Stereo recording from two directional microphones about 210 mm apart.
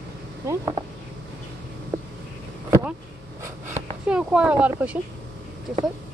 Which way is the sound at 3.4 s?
10° right (ahead or behind).